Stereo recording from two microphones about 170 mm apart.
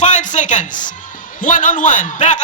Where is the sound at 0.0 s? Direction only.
45° left (ahead or behind).